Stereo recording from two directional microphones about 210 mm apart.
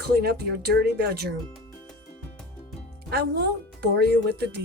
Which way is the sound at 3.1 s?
50° right (ahead or behind).